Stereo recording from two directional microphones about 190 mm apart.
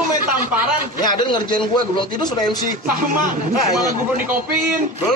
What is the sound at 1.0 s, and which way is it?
A man's voice, 20° left (ahead or behind).